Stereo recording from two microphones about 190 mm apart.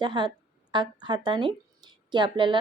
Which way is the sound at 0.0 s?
25° right (ahead or behind).